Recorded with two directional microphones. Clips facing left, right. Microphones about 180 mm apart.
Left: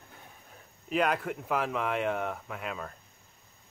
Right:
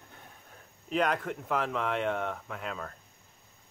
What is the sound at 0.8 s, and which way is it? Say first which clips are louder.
Speech: left 1 dB; 5° left (ahead or behind).